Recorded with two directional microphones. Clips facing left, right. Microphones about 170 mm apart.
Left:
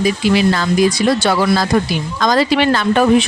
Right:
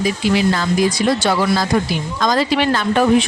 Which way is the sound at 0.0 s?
75° left (ahead or behind).